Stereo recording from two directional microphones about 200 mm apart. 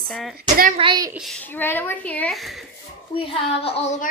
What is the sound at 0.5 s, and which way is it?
Speech, 40° right (ahead or behind).